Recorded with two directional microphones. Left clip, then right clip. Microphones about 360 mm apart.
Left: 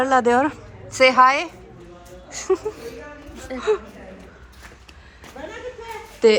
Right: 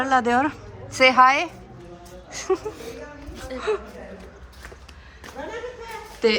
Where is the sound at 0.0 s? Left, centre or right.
Centre.